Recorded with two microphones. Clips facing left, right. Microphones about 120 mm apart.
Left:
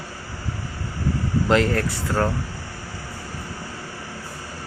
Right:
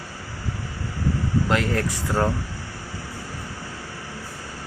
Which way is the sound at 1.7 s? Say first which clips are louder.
Even; 15° right (ahead or behind).